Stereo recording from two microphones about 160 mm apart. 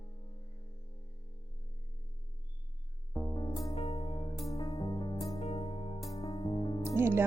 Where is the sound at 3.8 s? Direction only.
40° left (ahead or behind).